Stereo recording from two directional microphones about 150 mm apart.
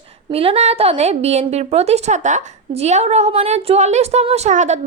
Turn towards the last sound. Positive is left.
turn(degrees=-50)  # may be behind; listen again after turning